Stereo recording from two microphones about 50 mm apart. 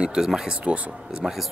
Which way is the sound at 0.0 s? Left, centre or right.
Centre.